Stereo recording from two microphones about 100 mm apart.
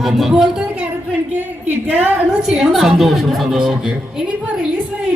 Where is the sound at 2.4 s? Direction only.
5° right (ahead or behind).